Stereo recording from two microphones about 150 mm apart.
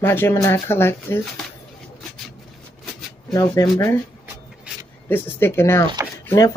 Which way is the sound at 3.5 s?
20° left (ahead or behind).